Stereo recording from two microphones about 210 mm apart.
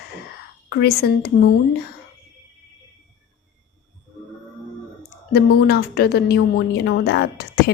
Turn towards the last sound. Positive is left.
turn(degrees=50)  # may be behind; listen again after turning